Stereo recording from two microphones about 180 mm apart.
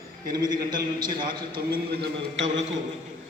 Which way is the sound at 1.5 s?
80° right.